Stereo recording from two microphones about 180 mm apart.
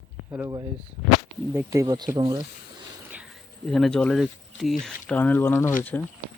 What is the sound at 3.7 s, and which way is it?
Speech, centre (ahead or behind).